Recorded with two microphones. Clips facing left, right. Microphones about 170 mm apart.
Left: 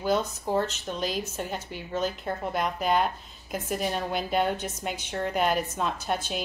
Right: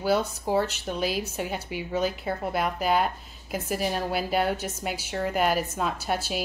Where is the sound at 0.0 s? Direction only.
10° right (ahead or behind).